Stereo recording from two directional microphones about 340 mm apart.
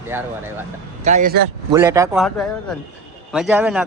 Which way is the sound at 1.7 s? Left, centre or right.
Centre.